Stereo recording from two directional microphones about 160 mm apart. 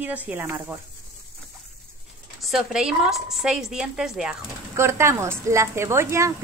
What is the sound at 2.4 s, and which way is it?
A woman's voice, centre (ahead or behind).